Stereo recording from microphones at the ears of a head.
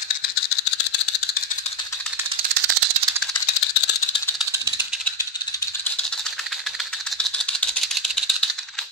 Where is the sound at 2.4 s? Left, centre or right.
Right.